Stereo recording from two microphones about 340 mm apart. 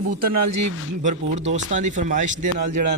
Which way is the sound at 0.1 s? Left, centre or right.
Right.